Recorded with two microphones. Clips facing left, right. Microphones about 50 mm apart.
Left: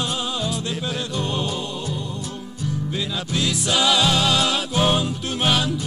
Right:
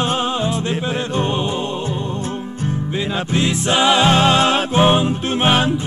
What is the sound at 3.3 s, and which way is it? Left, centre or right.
Music, right.